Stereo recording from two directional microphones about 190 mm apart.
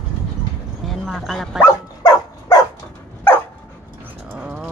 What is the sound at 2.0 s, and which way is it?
Dog, 20° left (ahead or behind).